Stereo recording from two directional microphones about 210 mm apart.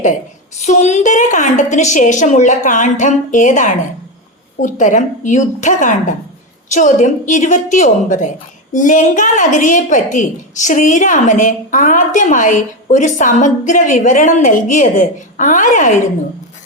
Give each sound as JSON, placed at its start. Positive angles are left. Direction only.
{"t": 0.6, "sound": "a woman's voice", "side_deg": 35}